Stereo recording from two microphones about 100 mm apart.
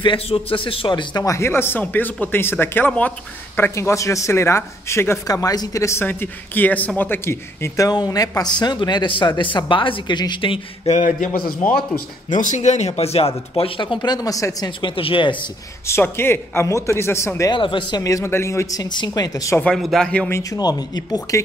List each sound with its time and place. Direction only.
0.0 s a man's voice: 60° left (ahead or behind)
1.2 s speech: 30° left (ahead or behind)
6.0 s speech: 20° left (ahead or behind); by 11.0 s 60° left (ahead or behind)
12.8 s speech: 90° left
13.7 s speech: 50° left (ahead or behind); by 14.7 s 35° left (ahead or behind)
14.8 s a man's voice: 60° left (ahead or behind)
15.9 s speech: 25° left (ahead or behind)
17.5 s a man's voice: 55° left (ahead or behind)
18.0 s speech: 30° left (ahead or behind)
19.6 s speech: centre (ahead or behind)
20.5 s speech: 40° left (ahead or behind)